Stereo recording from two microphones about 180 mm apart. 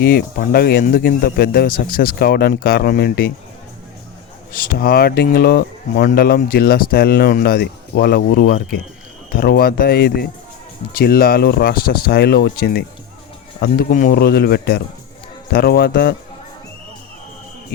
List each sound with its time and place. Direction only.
0.0 s a man's voice: 55° left (ahead or behind)
4.5 s a man's voice: 55° left (ahead or behind)
13.6 s a man's voice: 50° left (ahead or behind)